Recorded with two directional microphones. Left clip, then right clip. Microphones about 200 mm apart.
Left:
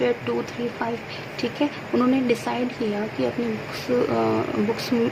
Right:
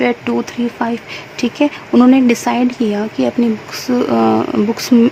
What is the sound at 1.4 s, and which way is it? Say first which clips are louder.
Speech: right 10 dB; 55° right (ahead or behind).